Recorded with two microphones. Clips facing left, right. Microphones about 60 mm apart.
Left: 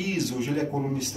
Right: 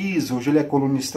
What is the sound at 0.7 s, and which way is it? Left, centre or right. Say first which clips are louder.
Speech: right 8 dB; right.